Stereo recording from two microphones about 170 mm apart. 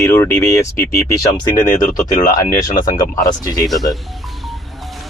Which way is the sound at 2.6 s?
20° left (ahead or behind).